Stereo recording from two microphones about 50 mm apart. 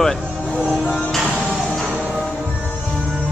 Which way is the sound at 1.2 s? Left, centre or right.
Centre.